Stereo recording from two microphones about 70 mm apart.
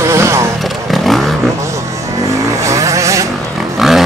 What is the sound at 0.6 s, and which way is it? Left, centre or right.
Vehicle, centre.